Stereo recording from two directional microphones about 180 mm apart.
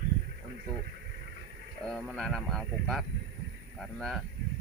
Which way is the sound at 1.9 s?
Centre (ahead or behind).